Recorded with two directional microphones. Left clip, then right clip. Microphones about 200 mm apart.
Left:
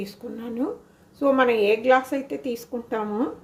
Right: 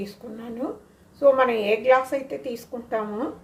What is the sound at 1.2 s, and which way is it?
A woman's voice, 45° left (ahead or behind).